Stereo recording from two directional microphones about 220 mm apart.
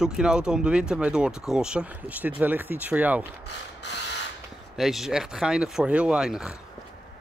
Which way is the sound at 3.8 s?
50° left (ahead or behind).